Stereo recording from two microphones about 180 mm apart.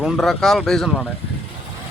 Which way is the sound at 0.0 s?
Centre (ahead or behind).